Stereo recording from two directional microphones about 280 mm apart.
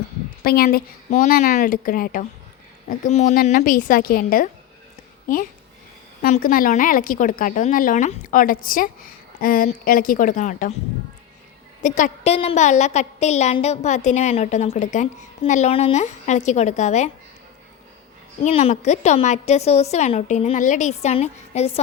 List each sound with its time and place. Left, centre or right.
0.4 s a woman's voice: left
6.2 s a woman's voice: left
11.8 s a woman's voice: left
18.4 s a woman's voice: left